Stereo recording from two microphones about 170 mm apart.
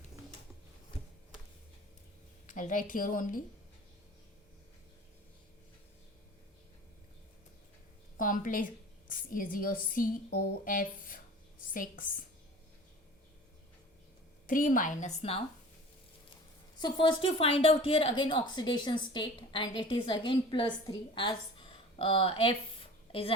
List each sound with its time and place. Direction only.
2.5 s a woman's voice: 50° left (ahead or behind)
8.2 s a woman's voice: 55° left (ahead or behind)
14.4 s a woman's voice: 50° left (ahead or behind)
16.8 s a woman's voice: 30° left (ahead or behind)